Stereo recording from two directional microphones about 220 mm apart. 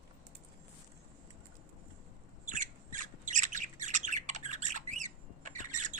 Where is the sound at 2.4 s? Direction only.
35° right (ahead or behind).